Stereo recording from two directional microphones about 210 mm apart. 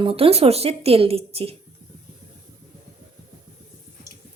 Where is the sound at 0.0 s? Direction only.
25° right (ahead or behind).